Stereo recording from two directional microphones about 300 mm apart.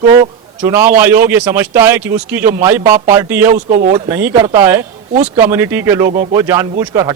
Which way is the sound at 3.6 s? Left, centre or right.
Right.